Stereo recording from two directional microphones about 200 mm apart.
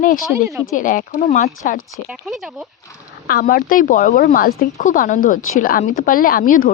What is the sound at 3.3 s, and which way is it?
Speech, 45° left (ahead or behind).